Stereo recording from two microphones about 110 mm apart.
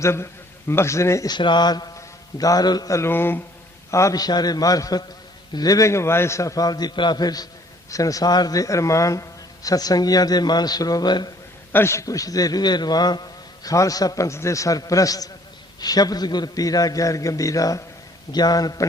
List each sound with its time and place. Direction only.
0.0 s a man's voice: 25° left (ahead or behind)
1.3 s a man's voice: 45° left (ahead or behind); by 3.4 s 20° left (ahead or behind)
3.9 s a man's voice: 30° left (ahead or behind)
11.7 s a man's voice: 25° left (ahead or behind)